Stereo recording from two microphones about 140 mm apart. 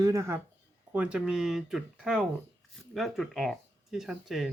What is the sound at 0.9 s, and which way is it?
Speech, 10° right (ahead or behind).